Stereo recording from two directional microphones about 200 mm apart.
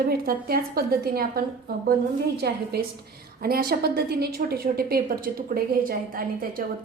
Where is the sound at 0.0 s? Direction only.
50° right (ahead or behind).